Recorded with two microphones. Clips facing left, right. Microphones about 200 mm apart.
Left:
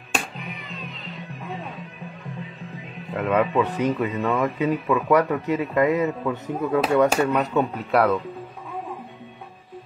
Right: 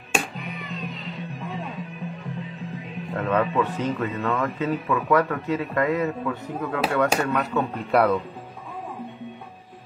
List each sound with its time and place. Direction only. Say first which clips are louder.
3.1 s a man's voice: left 2 dB; 10° left (ahead or behind)
7.9 s speech: even; centre (ahead or behind)